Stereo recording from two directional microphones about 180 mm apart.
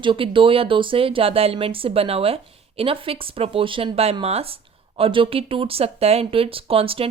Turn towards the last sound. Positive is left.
turn(degrees=-30)  # may be behind; listen again after turning